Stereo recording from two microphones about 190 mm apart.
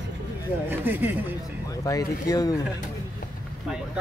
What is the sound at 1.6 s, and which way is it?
Speech, 20° left (ahead or behind).